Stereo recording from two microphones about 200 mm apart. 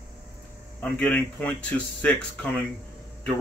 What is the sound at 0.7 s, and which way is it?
Speech, 5° left (ahead or behind).